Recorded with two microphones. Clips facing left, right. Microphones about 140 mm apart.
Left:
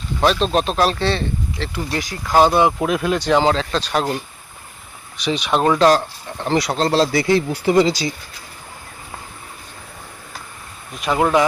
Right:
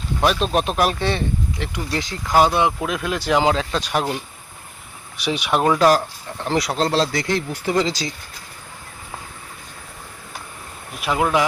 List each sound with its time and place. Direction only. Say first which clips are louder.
0.2 s speech: left 2 dB; 10° right (ahead or behind)
2.8 s speech: left 5 dB; 5° left (ahead or behind)
5.1 s speech: left 1 dB; 10° right (ahead or behind); by 8.1 s 10° left (ahead or behind)
11.0 s speech: left 3 dB; centre (ahead or behind)